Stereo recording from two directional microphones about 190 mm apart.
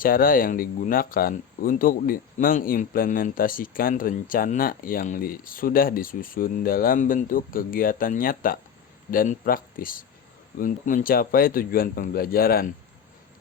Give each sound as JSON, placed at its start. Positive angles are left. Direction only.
{"t": 0.0, "sound": "speech", "side_deg": 50}